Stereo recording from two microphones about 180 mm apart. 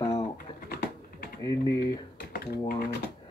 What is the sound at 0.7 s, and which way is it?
Typing, 60° left (ahead or behind).